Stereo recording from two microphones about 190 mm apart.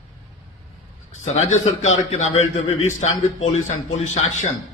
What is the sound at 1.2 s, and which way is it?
A man's voice, 35° left (ahead or behind).